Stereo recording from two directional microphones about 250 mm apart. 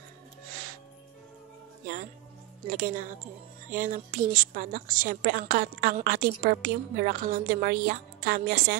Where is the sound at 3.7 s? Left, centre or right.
Right.